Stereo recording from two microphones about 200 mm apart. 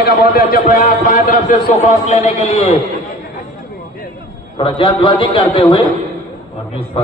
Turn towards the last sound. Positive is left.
turn(degrees=25)  # may be behind; listen again after turning